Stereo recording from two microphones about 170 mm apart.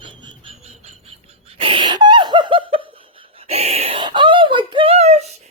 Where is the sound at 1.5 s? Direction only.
30° right (ahead or behind).